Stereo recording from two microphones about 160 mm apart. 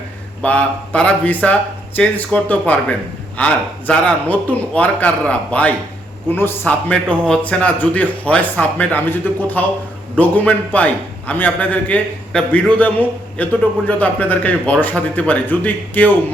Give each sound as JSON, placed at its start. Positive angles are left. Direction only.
{"t": 0.4, "sound": "a man's voice", "side_deg": 10}